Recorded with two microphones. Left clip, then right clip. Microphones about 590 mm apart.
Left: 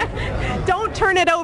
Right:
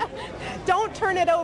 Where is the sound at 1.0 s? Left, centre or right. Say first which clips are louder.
Left 5 dB; left.